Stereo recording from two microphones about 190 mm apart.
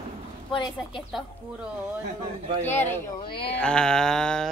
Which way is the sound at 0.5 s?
25° left (ahead or behind).